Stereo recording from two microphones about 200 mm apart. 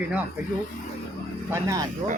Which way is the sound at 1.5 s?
15° right (ahead or behind).